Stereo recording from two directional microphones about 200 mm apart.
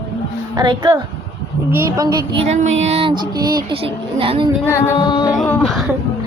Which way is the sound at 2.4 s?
35° right (ahead or behind).